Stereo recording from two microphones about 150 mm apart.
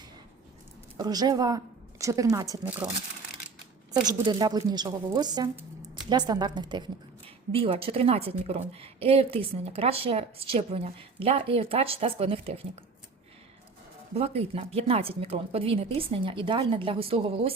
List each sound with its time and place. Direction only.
0.9 s a woman's voice: 25° right (ahead or behind)
2.6 s speech: 10° right (ahead or behind)
4.0 s a woman's voice: 25° right (ahead or behind)
14.1 s a woman's voice: 45° right (ahead or behind)